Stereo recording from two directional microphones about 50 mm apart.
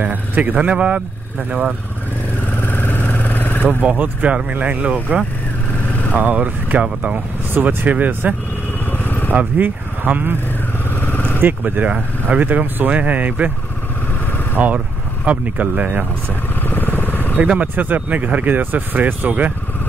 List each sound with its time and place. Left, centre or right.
0.0 s speech: right
0.6 s speech: right
2.6 s vehicle: left
3.6 s speech: right
8.9 s vehicle: left
9.3 s speech: right
11.0 s vehicle: left
11.4 s speech: right
14.6 s speech: right
16.6 s vehicle: left
17.7 s speech: right